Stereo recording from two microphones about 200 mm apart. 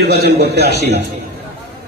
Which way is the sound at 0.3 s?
55° right (ahead or behind).